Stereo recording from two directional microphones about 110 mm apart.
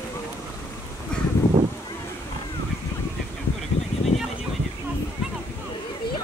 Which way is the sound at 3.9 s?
70° left (ahead or behind).